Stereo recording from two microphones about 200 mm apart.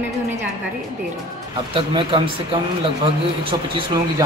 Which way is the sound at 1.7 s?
25° right (ahead or behind).